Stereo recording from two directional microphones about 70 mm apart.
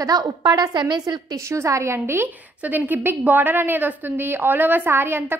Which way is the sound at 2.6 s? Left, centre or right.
Right.